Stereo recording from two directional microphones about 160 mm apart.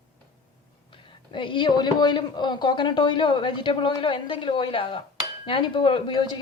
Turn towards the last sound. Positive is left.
turn(degrees=30)  # may be behind; listen again after turning